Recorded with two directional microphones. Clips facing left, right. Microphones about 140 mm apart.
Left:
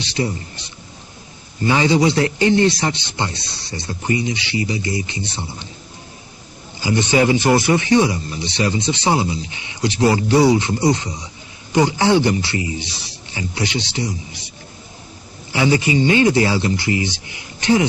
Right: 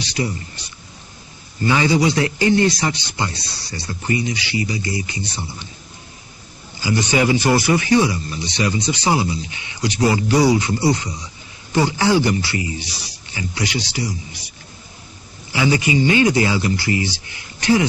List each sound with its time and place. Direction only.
0.0 s speech: 25° left (ahead or behind)
1.6 s speech: 25° left (ahead or behind)
6.8 s speech: 25° left (ahead or behind)
15.5 s speech: 30° left (ahead or behind)